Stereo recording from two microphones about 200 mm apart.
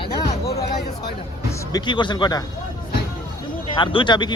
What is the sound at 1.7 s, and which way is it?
Speech, 25° left (ahead or behind).